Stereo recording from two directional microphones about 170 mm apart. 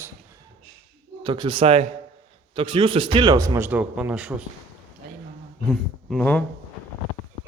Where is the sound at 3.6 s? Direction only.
10° right (ahead or behind).